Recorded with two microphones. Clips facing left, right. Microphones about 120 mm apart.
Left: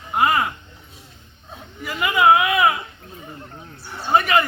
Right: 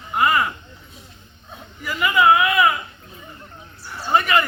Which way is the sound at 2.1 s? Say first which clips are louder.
Even; 20° left (ahead or behind).